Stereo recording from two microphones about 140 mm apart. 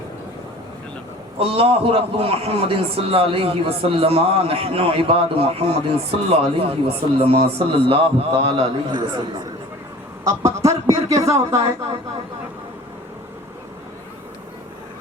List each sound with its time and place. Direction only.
1.4 s a man's voice: 40° right (ahead or behind)
10.2 s speech: 25° right (ahead or behind)